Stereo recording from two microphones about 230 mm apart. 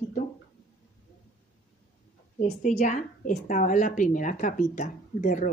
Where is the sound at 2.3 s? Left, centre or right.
Left.